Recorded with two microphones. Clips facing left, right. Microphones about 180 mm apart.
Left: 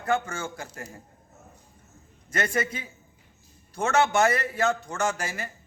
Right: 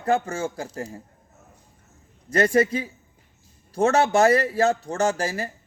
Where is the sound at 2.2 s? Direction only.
35° right (ahead or behind).